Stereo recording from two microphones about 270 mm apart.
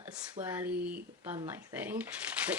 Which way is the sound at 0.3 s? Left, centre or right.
Centre.